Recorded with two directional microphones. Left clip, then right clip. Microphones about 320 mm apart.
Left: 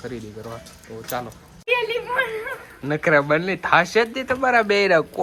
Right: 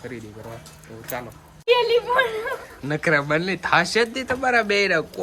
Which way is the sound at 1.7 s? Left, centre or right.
Right.